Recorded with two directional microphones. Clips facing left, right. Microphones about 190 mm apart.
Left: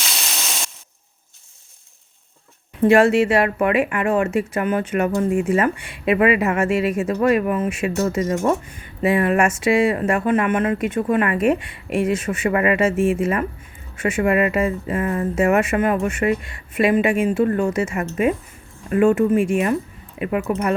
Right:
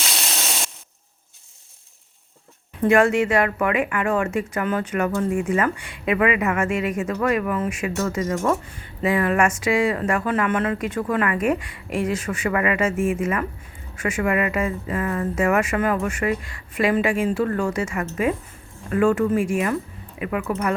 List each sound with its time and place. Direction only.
2.8 s speech: 25° left (ahead or behind)